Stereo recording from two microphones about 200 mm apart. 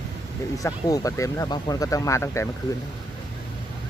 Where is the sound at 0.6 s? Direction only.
15° left (ahead or behind).